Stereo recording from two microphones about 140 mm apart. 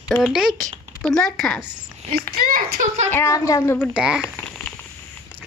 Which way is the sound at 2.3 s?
90° right.